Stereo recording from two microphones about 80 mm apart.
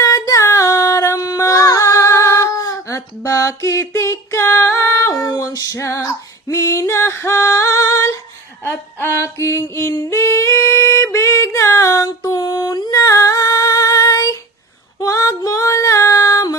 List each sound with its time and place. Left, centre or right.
0.0 s a sound: left
5.3 s music: left
6.5 s female singing: left
8.6 s a sound: left
10.0 s singing: left
14.9 s female singing: left